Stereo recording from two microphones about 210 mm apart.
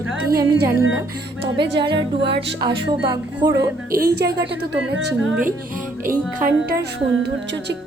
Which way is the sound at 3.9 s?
50° right (ahead or behind).